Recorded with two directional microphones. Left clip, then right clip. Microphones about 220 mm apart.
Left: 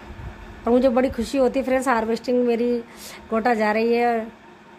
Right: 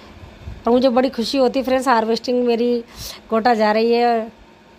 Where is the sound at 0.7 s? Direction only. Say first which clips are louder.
Right 3 dB; 10° right (ahead or behind).